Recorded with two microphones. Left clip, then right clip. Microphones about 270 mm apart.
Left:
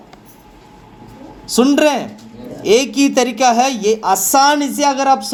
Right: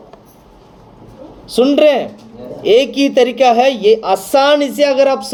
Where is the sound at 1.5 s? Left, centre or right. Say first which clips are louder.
Right 3 dB; left.